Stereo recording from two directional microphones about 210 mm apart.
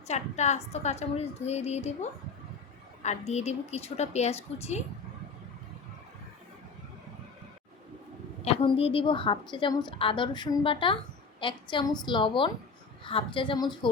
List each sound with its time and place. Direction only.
0.1 s a woman's voice: 35° left (ahead or behind)
8.4 s a woman's voice: 30° left (ahead or behind)